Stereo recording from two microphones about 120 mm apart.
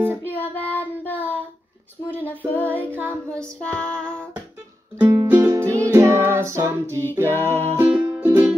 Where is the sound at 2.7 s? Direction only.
15° left (ahead or behind).